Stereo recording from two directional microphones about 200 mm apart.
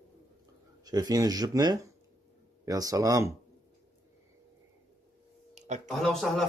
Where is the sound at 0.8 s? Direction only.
20° right (ahead or behind).